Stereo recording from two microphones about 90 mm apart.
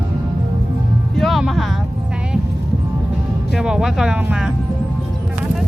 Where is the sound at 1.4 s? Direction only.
Centre (ahead or behind).